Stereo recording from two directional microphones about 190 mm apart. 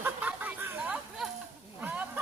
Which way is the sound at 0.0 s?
10° right (ahead or behind).